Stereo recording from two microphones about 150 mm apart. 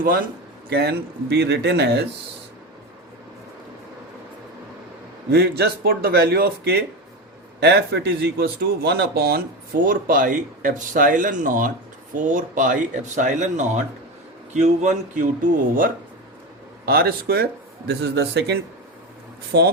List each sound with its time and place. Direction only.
0.0 s speech: 70° right (ahead or behind)
0.7 s speech: 90° right
5.3 s speech: 90° right
9.8 s speech: 65° right (ahead or behind)
16.8 s speech: 90° right